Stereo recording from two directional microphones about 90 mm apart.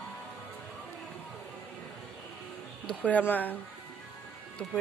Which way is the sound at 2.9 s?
15° left (ahead or behind).